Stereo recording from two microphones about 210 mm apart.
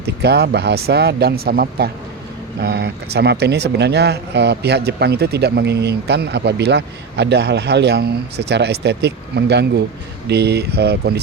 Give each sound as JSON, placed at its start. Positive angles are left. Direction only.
{"t": 0.0, "sound": "speech", "side_deg": -50}